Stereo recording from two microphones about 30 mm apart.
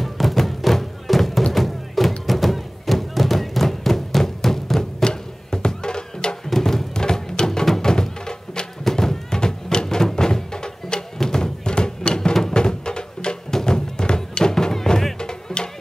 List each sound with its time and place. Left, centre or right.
0.0 s music: centre
5.0 s music: left
6.5 s music: centre
7.0 s music: left
7.9 s music: left
11.1 s a sound: centre
12.5 s music: left
15.1 s music: left